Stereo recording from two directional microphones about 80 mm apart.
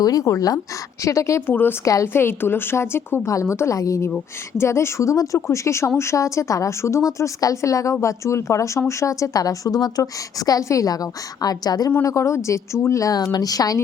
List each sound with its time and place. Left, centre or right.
0.0 s a woman's voice: left
1.5 s speech: left
1.8 s a woman's voice: left
2.2 s a woman's voice: left
12.0 s a woman's voice: left